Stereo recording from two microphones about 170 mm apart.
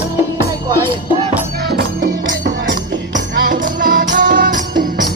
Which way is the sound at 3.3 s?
55° right (ahead or behind).